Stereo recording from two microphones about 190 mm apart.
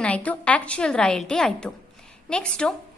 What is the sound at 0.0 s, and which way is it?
A woman's voice, 5° left (ahead or behind).